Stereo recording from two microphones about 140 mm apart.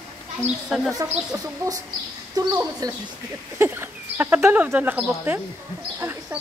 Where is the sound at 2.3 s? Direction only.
25° right (ahead or behind).